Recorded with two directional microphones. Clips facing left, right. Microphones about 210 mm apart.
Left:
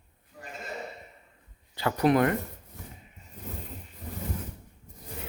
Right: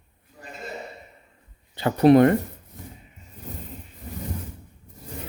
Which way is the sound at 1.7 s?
25° right (ahead or behind).